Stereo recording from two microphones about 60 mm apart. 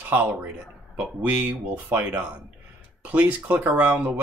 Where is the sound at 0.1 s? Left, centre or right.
Right.